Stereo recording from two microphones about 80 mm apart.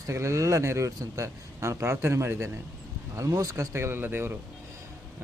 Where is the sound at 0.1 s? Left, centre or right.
Right.